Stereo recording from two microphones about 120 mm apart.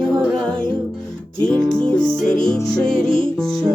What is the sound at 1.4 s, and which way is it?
Music, 40° right (ahead or behind).